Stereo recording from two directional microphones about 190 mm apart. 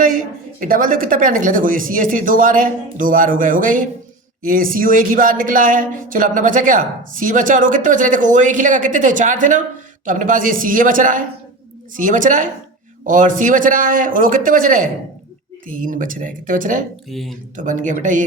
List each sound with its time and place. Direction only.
0.6 s a woman's voice: 45° right (ahead or behind)
17.1 s speech: centre (ahead or behind)
17.6 s speech: 40° right (ahead or behind)